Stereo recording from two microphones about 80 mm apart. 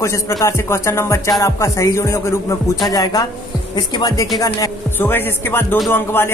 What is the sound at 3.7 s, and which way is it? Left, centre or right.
Speech, left.